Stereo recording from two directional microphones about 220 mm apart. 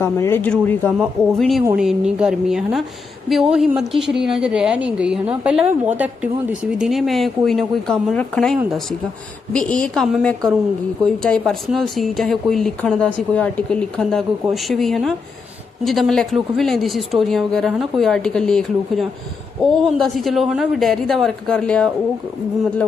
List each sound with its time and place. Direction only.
0.0 s a woman's voice: 10° left (ahead or behind)